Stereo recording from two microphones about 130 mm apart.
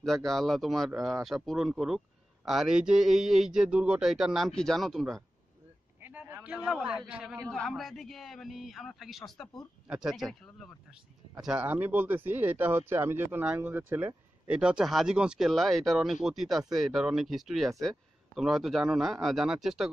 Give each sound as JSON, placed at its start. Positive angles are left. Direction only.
{"t": 0.0, "sound": "a man's voice", "side_deg": 0}
{"t": 5.9, "sound": "a man's voice", "side_deg": -15}
{"t": 11.4, "sound": "a man's voice", "side_deg": -10}